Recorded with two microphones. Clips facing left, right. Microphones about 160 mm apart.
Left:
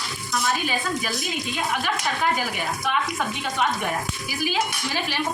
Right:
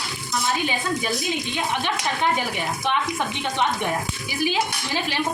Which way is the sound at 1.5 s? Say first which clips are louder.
Left 2 dB; 25° right (ahead or behind).